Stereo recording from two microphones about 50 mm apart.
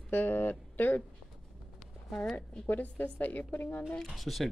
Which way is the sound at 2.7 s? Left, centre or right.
Left.